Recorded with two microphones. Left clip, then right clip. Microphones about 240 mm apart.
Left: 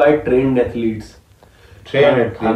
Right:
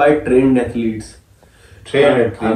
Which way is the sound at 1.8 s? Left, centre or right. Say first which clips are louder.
Even; centre.